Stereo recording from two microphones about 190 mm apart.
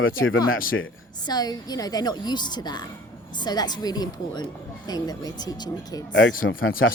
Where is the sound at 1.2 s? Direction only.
20° left (ahead or behind).